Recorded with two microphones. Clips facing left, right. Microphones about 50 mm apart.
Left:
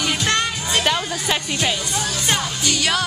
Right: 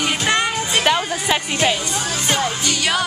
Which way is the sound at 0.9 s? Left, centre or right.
Centre.